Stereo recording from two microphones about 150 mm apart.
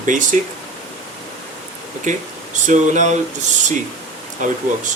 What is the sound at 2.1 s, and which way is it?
Speech, 55° right (ahead or behind).